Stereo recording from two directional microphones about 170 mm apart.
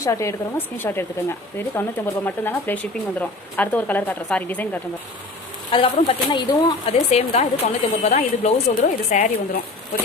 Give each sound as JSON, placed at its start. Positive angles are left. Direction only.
{"t": 0.0, "sound": "speech", "side_deg": 15}
{"t": 5.7, "sound": "speech", "side_deg": 30}